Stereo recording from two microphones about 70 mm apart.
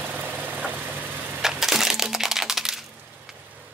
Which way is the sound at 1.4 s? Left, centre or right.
Centre.